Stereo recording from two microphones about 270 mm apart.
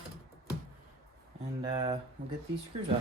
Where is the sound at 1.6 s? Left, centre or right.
Centre.